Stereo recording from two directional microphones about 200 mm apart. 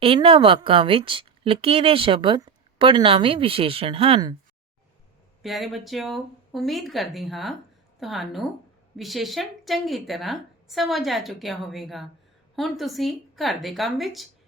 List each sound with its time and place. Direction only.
0.0 s a woman's voice: 25° right (ahead or behind)
5.4 s a woman's voice: centre (ahead or behind)